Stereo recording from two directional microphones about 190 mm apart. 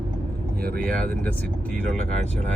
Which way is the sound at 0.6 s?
50° right (ahead or behind).